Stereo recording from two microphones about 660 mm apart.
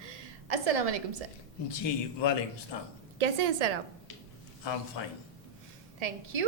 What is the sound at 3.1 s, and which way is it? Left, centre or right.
Speech, right.